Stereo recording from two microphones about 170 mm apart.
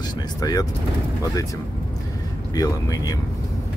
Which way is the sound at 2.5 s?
20° left (ahead or behind).